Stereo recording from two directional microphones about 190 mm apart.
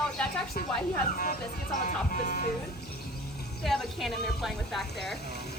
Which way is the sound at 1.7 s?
45° left (ahead or behind).